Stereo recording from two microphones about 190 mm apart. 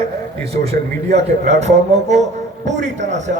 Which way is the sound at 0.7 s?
35° right (ahead or behind).